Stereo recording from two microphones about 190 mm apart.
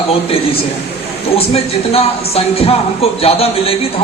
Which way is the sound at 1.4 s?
30° left (ahead or behind).